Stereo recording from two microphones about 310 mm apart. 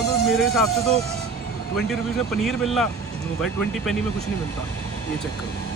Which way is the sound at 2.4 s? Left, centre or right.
Centre.